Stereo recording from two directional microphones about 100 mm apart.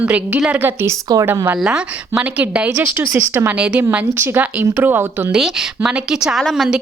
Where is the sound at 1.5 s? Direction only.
10° right (ahead or behind).